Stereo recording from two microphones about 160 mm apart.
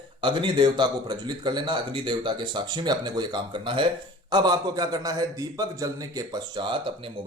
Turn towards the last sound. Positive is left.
turn(degrees=-30)  # may be behind; listen again after turning